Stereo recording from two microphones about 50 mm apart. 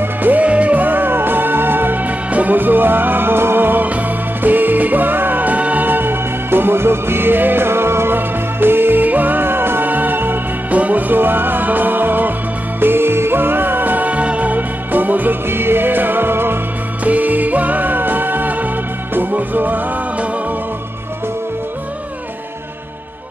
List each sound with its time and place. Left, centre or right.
0.0 s music: right
10.7 s music: right
17.0 s music: right